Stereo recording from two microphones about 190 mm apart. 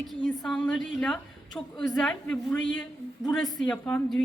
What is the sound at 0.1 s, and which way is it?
A woman's voice, 5° left (ahead or behind).